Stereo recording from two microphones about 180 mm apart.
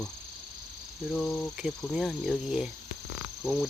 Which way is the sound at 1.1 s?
Centre (ahead or behind).